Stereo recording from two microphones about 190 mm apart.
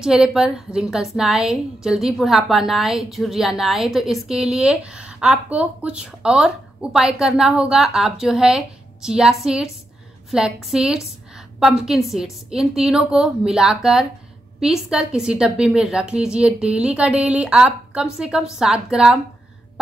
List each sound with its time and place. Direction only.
0.0 s a woman's voice: 5° right (ahead or behind)